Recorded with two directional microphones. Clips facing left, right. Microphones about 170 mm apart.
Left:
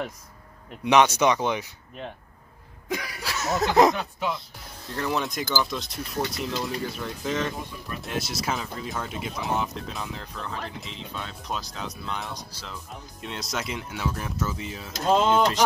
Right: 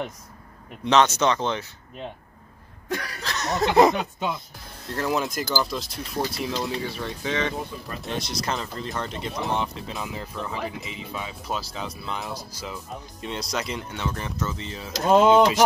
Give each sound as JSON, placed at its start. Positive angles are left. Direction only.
{"t": 0.8, "sound": "speech", "side_deg": 10}
{"t": 2.9, "sound": "speech", "side_deg": 10}
{"t": 4.0, "sound": "speech", "side_deg": -15}
{"t": 4.8, "sound": "speech", "side_deg": 0}
{"t": 15.0, "sound": "speech", "side_deg": -90}